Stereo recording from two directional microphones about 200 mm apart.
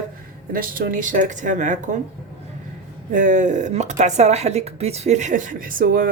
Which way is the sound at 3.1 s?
40° right (ahead or behind).